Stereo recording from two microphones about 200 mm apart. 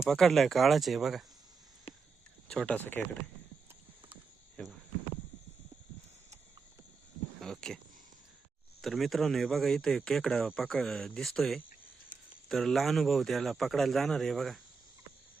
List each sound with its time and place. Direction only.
0.1 s speech: centre (ahead or behind)
1.9 s a sound: 30° left (ahead or behind)
2.5 s speech: 5° left (ahead or behind)
4.6 s speech: 5° left (ahead or behind)
7.3 s a sound: centre (ahead or behind)
8.8 s speech: centre (ahead or behind)